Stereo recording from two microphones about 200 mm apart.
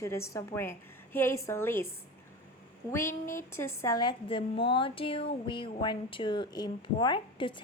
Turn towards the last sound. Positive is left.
turn(degrees=25)  # may be behind; listen again after turning